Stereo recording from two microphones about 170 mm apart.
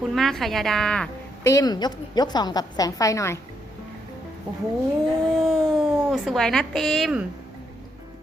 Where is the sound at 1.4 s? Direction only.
20° left (ahead or behind).